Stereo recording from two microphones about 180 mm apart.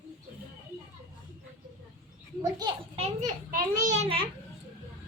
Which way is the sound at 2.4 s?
25° right (ahead or behind).